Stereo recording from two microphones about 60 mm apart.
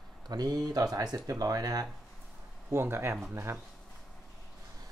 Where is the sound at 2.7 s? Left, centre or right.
Right.